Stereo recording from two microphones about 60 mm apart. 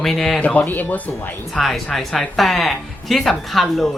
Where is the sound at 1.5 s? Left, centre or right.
Centre.